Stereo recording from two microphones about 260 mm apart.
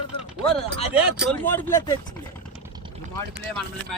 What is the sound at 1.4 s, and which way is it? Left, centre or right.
Speech, centre.